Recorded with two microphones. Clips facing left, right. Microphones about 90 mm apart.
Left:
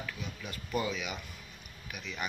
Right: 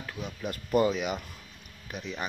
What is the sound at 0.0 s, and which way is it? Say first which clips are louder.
Speech: right 5 dB; 40° right (ahead or behind).